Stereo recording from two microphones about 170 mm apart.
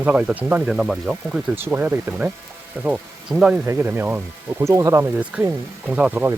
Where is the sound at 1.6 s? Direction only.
10° right (ahead or behind).